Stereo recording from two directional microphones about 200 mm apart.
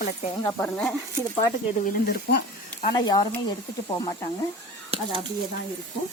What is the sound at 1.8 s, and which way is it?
Speech, 50° left (ahead or behind).